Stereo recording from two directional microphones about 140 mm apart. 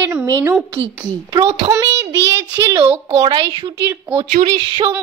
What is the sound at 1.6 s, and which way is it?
Speech, 35° right (ahead or behind).